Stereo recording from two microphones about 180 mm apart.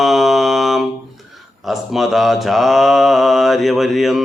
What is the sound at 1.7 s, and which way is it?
Mantra, centre (ahead or behind).